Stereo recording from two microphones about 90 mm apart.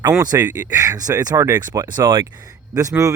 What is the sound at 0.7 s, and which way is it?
Speech, 40° right (ahead or behind).